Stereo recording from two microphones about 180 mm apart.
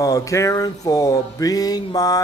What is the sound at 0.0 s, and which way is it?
Speech, 15° left (ahead or behind).